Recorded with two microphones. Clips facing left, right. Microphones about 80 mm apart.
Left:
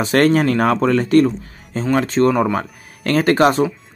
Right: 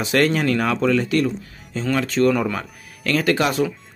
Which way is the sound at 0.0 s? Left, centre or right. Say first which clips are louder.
Left 4 dB; left.